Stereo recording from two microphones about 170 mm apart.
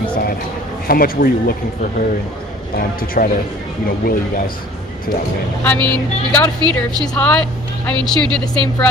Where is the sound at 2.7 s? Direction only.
60° left (ahead or behind).